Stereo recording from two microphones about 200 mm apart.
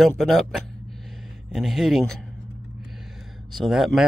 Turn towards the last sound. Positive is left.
turn(degrees=0)  # may be behind; listen again after turning